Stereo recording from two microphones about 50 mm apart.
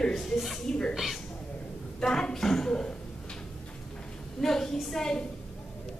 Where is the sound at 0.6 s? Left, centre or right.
Centre.